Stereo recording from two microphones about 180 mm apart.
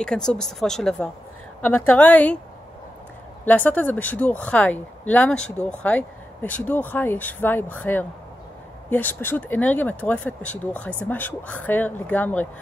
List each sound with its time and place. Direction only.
0.0 s speech: 5° left (ahead or behind)
3.4 s speech: 10° left (ahead or behind)